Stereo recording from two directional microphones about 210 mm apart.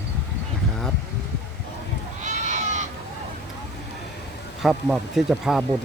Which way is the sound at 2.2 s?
35° right (ahead or behind).